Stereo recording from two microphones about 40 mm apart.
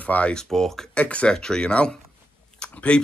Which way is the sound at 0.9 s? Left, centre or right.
Left.